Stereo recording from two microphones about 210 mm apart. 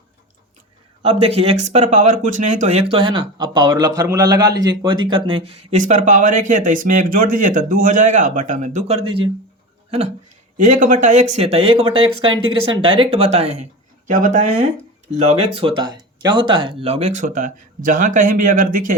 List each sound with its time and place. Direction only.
1.0 s speech: 25° right (ahead or behind)
5.7 s speech: 35° right (ahead or behind)
10.6 s speech: 40° right (ahead or behind)
15.2 s speech: 90° right
15.6 s speech: 20° right (ahead or behind); by 18.9 s 40° right (ahead or behind)